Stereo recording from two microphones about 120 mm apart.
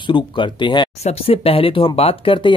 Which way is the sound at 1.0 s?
55° left (ahead or behind).